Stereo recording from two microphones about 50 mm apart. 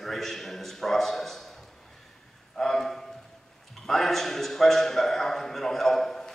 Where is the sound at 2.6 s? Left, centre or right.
Centre.